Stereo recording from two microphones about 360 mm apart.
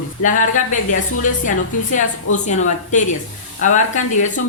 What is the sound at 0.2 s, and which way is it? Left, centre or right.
Speech, left.